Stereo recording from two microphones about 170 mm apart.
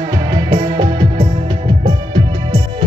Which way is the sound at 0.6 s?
30° right (ahead or behind).